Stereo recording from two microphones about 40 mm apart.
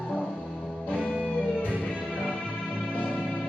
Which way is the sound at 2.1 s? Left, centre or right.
Left.